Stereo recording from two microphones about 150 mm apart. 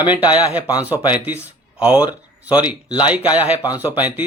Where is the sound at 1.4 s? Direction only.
10° right (ahead or behind).